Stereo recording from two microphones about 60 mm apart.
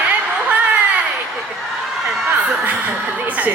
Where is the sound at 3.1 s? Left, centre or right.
Right.